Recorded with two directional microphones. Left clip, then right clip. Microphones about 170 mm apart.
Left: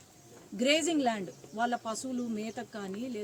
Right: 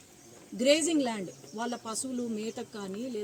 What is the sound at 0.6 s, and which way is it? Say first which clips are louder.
Speech: right 2 dB; 5° left (ahead or behind).